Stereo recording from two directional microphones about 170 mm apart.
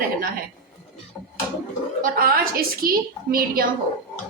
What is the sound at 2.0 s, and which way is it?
A woman's voice, 55° right (ahead or behind).